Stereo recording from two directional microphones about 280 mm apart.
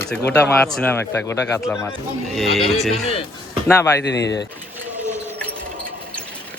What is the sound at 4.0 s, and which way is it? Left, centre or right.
Speech, left.